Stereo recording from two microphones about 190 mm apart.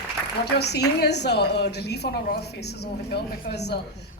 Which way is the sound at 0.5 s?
60° left (ahead or behind).